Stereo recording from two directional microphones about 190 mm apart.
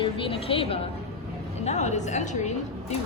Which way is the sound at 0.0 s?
30° left (ahead or behind).